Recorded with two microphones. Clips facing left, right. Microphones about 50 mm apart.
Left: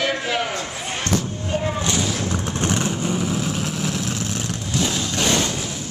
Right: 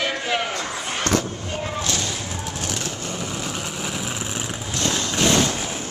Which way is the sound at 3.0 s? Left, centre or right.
Centre.